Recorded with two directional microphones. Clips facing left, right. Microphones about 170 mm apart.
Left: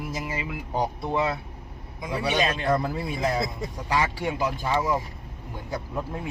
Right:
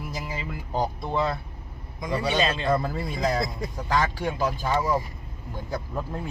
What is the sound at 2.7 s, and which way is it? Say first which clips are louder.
Speech: even; 5° left (ahead or behind).